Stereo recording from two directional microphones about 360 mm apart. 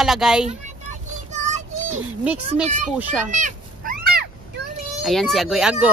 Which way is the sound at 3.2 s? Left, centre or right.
Centre.